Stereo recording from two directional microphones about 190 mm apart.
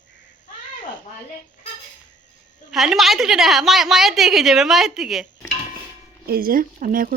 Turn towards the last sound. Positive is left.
turn(degrees=-45)  # may be behind; listen again after turning